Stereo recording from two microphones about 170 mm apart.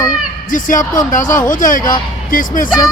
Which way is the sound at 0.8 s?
20° left (ahead or behind).